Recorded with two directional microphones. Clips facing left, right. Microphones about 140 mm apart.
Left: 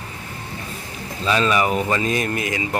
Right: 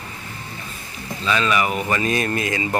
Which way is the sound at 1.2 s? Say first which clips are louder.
Left 2 dB; 35° left (ahead or behind).